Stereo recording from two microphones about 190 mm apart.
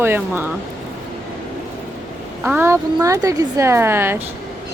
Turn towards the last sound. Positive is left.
turn(degrees=-10)  # may be behind; listen again after turning